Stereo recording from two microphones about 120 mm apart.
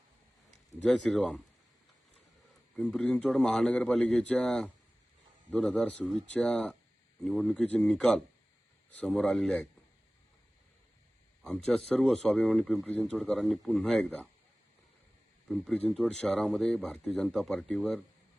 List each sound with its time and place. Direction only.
0.9 s speech: 5° left (ahead or behind)
2.7 s speech: 5° left (ahead or behind)
11.4 s speech: 5° left (ahead or behind)
15.4 s speech: centre (ahead or behind)